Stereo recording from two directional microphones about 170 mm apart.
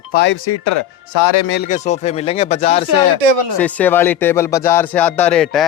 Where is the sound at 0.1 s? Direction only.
85° left.